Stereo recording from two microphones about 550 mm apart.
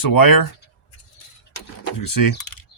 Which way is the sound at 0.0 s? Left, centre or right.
Left.